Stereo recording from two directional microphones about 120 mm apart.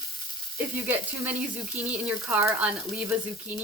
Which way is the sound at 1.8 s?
10° right (ahead or behind).